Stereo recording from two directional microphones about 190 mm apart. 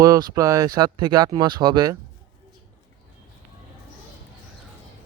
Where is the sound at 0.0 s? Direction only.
20° right (ahead or behind).